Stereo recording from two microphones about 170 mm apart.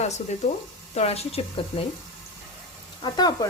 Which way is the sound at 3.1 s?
25° left (ahead or behind).